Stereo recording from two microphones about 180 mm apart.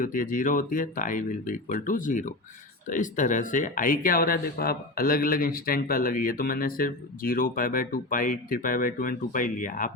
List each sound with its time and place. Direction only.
0.0 s speech: 50° left (ahead or behind)